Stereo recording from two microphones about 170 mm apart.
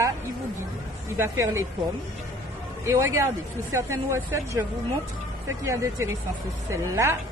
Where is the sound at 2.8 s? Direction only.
15° right (ahead or behind).